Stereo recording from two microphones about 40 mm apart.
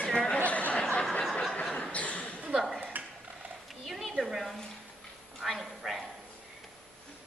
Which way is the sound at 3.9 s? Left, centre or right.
Centre.